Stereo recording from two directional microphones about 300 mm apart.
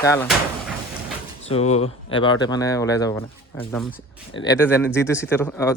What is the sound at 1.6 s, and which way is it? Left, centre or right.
Speech, left.